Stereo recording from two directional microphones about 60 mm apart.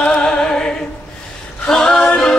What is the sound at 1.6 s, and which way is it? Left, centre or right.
A capella, centre.